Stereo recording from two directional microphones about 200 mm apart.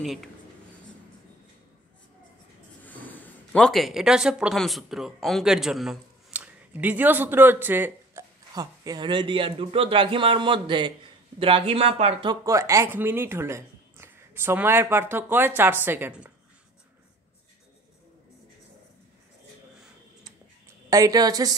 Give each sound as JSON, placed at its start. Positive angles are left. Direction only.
{"t": 0.0, "sound": "speech", "side_deg": 0}
{"t": 2.8, "sound": "speech", "side_deg": 10}
{"t": 20.9, "sound": "a woman's voice", "side_deg": -20}